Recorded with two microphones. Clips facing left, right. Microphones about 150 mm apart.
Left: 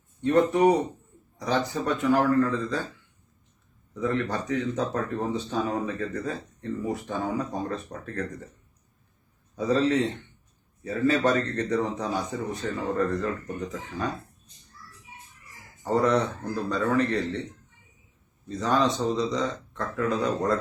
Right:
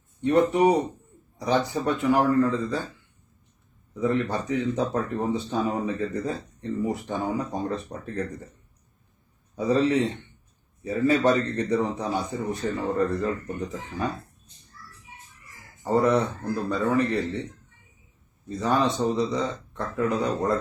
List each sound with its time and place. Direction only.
0.2 s a man's voice: 15° right (ahead or behind)
3.9 s speech: 10° right (ahead or behind)
9.6 s speech: 10° right (ahead or behind)
15.8 s speech: 10° right (ahead or behind)
18.4 s speech: 10° right (ahead or behind)